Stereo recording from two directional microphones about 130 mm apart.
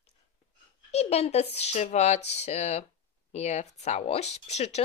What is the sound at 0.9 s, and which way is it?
Speech, 55° left (ahead or behind).